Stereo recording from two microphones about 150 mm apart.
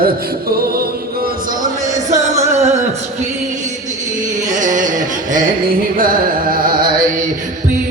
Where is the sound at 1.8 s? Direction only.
55° right (ahead or behind).